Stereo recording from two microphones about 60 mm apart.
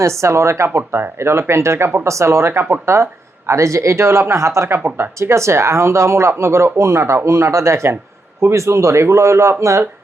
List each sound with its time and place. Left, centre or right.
0.0 s speech: right
0.8 s speech: right